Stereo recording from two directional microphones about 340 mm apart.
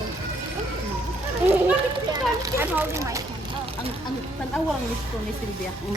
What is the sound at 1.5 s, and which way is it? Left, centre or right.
Speech, centre.